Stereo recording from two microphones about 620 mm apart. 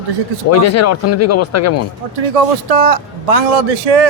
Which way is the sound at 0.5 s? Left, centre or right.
Left.